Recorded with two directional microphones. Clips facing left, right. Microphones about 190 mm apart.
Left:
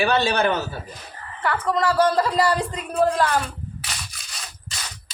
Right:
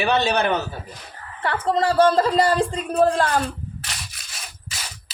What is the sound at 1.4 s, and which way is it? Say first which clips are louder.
Speech: right 1 dB; 30° right (ahead or behind).